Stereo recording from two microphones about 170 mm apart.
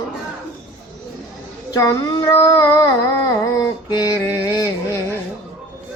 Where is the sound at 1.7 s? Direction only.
20° left (ahead or behind).